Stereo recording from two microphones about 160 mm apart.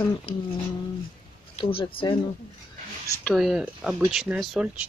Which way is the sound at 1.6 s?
35° left (ahead or behind).